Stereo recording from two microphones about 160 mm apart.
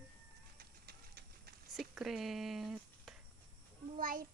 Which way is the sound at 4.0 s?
60° right (ahead or behind).